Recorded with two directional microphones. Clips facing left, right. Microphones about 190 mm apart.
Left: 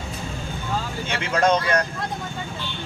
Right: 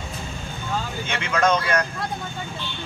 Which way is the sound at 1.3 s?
35° left (ahead or behind).